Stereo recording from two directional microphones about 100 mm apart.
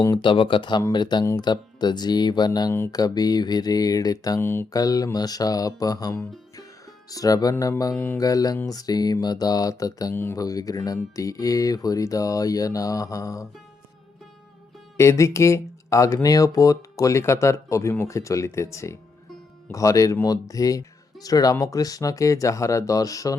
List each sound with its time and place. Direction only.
0.0 s speech: 50° left (ahead or behind)
4.4 s speech: 25° left (ahead or behind)
4.7 s speech: 40° left (ahead or behind)
7.9 s speech: 20° left (ahead or behind)
8.2 s speech: 35° left (ahead or behind)
14.9 s speech: 30° left (ahead or behind)